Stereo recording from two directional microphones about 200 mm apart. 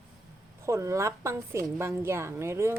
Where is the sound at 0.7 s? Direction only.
15° right (ahead or behind).